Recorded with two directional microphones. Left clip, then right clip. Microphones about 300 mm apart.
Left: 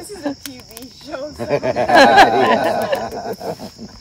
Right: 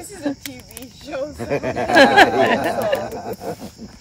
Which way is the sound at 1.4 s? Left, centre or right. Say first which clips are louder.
Left 6 dB; left.